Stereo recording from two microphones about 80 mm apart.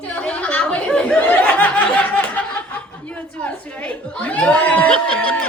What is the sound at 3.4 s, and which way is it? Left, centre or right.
Speech, centre.